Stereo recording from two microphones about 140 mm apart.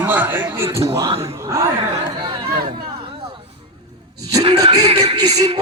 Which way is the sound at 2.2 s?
35° right (ahead or behind).